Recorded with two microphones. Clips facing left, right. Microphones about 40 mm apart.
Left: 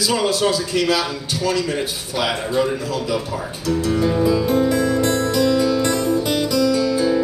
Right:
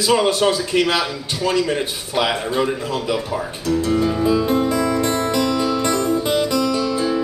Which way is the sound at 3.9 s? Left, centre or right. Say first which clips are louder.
Left 2 dB; centre.